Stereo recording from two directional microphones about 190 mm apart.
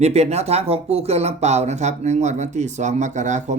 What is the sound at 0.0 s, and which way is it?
Speech, 35° right (ahead or behind).